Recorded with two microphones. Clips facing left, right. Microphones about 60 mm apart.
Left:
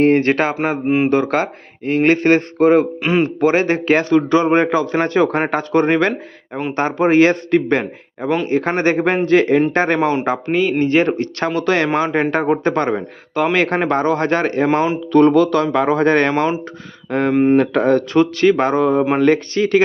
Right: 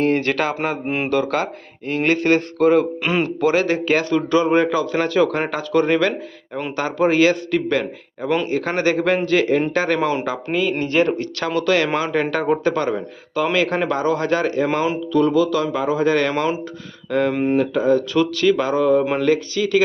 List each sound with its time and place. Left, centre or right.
0.0 s speech: left
0.9 s speech: centre
1.1 s speech: left
3.1 s speech: centre
3.4 s speech: left
6.7 s speech: left
12.6 s speech: left
15.1 s speech: left
16.3 s speech: left
17.6 s speech: left
18.1 s speech: left